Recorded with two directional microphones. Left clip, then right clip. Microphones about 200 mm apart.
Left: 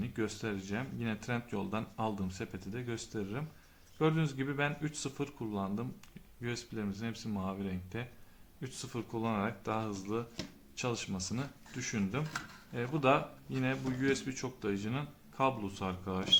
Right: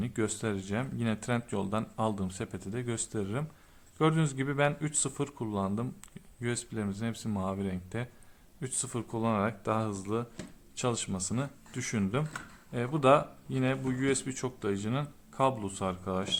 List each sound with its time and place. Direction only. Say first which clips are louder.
0.0 s speech: right 4 dB; 35° right (ahead or behind)